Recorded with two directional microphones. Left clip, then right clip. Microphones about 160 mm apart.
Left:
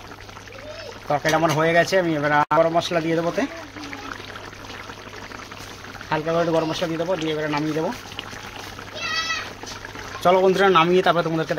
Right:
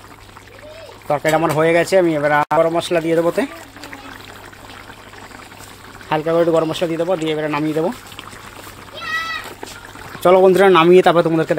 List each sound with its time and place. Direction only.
1.0 s speech: 45° right (ahead or behind)
6.0 s speech: 50° right (ahead or behind)
10.2 s speech: 40° right (ahead or behind)